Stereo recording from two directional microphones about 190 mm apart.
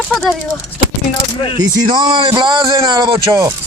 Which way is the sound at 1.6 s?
20° right (ahead or behind).